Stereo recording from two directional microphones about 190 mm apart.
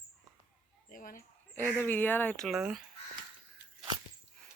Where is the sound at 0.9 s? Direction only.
45° left (ahead or behind).